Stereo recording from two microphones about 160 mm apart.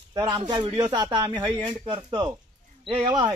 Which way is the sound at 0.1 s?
30° right (ahead or behind).